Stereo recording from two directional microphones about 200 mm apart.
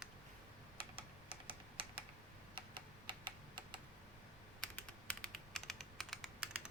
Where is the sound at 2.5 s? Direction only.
25° right (ahead or behind).